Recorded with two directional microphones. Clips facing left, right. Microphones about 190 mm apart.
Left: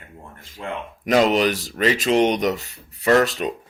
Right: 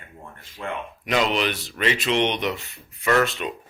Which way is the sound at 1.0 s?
45° left (ahead or behind).